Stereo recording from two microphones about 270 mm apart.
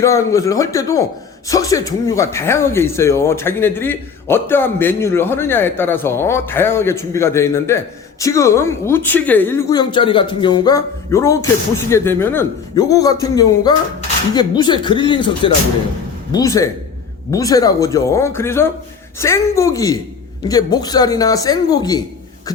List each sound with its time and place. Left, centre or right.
0.0 s speech: centre